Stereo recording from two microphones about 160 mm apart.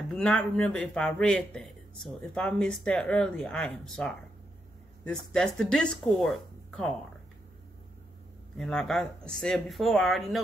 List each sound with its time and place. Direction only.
0.1 s speech: 5° left (ahead or behind)
8.5 s speech: centre (ahead or behind)